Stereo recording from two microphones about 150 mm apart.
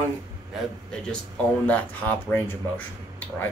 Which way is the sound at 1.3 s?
10° left (ahead or behind).